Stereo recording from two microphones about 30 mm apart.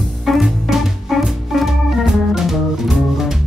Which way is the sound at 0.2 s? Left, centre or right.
Centre.